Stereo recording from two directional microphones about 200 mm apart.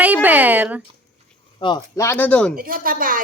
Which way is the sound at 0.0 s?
10° right (ahead or behind).